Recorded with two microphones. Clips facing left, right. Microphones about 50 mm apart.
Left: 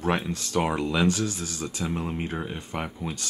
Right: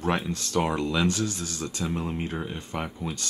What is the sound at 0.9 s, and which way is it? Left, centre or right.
Speech, left.